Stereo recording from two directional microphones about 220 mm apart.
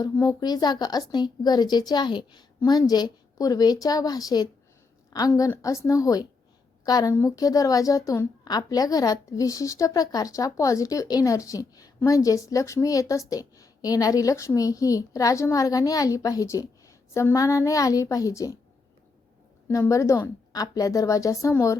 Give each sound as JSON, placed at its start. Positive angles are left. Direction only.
{"t": 0.0, "sound": "a woman's voice", "side_deg": 15}
{"t": 19.6, "sound": "a woman's voice", "side_deg": 10}